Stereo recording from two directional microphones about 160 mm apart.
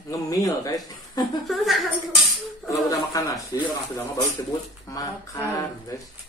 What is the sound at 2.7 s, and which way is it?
Speech, 20° left (ahead or behind).